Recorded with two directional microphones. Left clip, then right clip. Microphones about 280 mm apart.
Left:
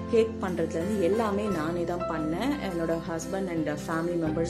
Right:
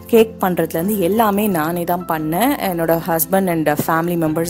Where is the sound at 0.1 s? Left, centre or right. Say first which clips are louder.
Right 12 dB; right.